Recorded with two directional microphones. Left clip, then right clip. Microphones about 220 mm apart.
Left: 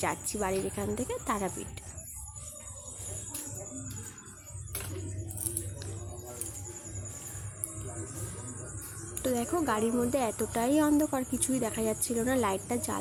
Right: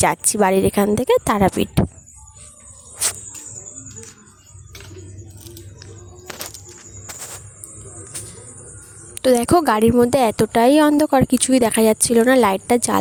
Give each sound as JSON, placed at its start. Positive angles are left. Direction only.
{"t": 0.0, "sound": "speech", "side_deg": -50}
{"t": 9.1, "sound": "speech", "side_deg": -50}